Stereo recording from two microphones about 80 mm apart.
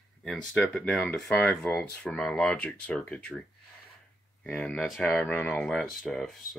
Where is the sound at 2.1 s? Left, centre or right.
Centre.